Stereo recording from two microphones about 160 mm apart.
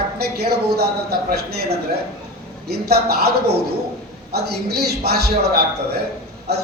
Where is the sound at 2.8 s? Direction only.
85° right.